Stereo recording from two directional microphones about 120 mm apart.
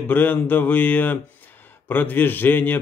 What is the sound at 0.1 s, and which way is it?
A man's voice, 15° left (ahead or behind).